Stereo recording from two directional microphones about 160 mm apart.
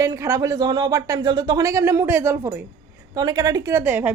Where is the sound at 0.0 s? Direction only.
20° right (ahead or behind).